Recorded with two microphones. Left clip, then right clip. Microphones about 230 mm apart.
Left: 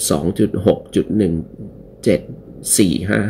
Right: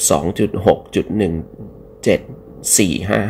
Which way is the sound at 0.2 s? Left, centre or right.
Centre.